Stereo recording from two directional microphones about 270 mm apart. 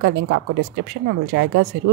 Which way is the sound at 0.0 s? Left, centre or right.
Right.